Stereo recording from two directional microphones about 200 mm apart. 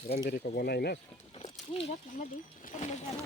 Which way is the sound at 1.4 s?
30° left (ahead or behind).